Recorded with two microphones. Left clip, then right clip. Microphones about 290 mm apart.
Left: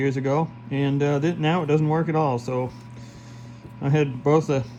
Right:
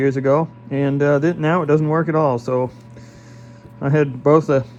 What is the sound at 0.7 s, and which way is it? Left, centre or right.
Speech, right.